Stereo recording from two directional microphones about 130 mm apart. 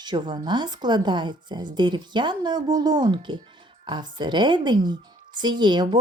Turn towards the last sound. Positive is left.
turn(degrees=-35)  # may be behind; listen again after turning